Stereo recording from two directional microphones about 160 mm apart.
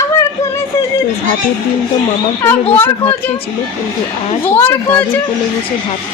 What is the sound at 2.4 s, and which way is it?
Speech, 10° left (ahead or behind).